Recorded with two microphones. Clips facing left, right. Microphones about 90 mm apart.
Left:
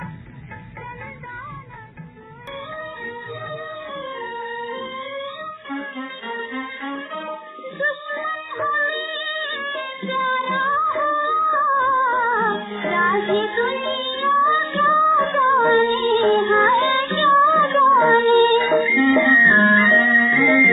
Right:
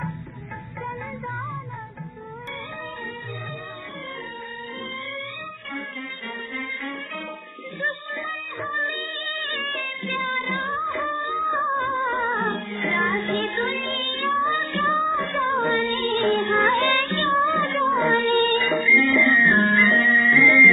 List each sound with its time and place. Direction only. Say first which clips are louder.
4.2 s music: left 7 dB; 40° left (ahead or behind)